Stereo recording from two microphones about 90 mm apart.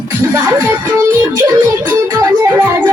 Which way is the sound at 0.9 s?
35° right (ahead or behind).